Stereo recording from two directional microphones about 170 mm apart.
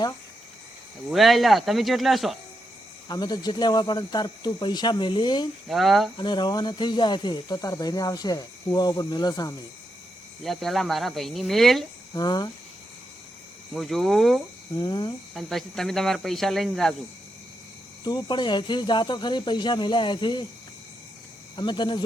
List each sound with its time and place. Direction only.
1.1 s speech: centre (ahead or behind)
3.1 s speech: 25° left (ahead or behind)
5.6 s speech: centre (ahead or behind)
6.1 s speech: 25° left (ahead or behind)
10.4 s speech: centre (ahead or behind)
12.1 s speech: 25° left (ahead or behind)
13.7 s speech: centre (ahead or behind)
14.8 s speech: 30° left (ahead or behind)
15.4 s speech: centre (ahead or behind)
18.0 s speech: 25° left (ahead or behind)
21.5 s speech: 25° left (ahead or behind)